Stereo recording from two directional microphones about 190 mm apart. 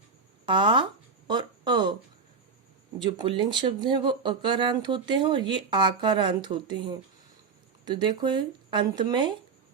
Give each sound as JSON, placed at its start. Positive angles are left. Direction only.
{"t": 0.4, "sound": "speech", "side_deg": -25}
{"t": 3.0, "sound": "speech", "side_deg": -25}